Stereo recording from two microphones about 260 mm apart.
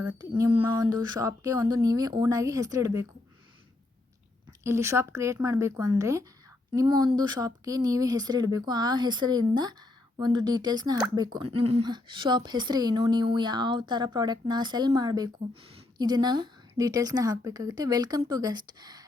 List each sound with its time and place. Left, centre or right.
0.0 s speech: centre
4.6 s speech: centre